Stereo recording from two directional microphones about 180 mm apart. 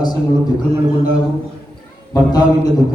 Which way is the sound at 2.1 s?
20° left (ahead or behind).